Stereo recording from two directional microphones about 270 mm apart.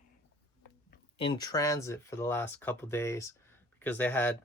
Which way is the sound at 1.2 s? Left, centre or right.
Centre.